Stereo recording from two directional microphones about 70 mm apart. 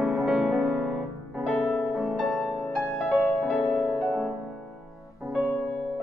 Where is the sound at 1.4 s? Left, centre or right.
Centre.